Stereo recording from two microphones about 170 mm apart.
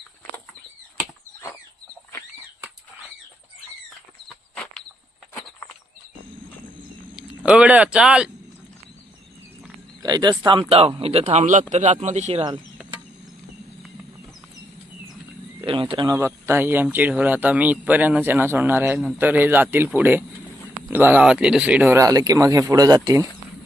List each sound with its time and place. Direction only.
4.3 s a sound: 5° left (ahead or behind)
7.2 s speech: 5° right (ahead or behind)
10.0 s speech: 25° right (ahead or behind); by 12.5 s 40° right (ahead or behind)
15.6 s speech: 30° right (ahead or behind)
16.1 s speech: 15° right (ahead or behind)
21.9 s speech: 20° right (ahead or behind)